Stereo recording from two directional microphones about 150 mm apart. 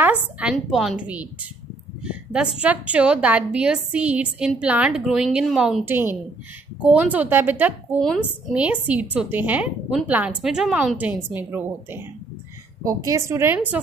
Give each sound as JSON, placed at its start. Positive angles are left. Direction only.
{"t": 0.0, "sound": "a woman's voice", "side_deg": -10}
{"t": 2.0, "sound": "a sound", "side_deg": -5}
{"t": 2.6, "sound": "a woman's voice", "side_deg": -10}
{"t": 5.9, "sound": "a woman's voice", "side_deg": -15}